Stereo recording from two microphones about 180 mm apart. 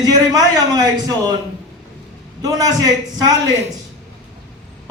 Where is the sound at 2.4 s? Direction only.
20° right (ahead or behind).